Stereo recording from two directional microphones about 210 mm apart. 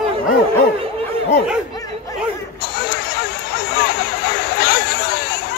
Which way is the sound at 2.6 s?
50° left (ahead or behind).